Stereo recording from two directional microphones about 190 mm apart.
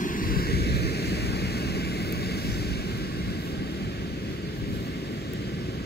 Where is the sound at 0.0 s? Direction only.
50° left (ahead or behind).